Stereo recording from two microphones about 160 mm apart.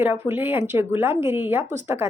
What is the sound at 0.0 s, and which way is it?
A woman's voice, 15° right (ahead or behind).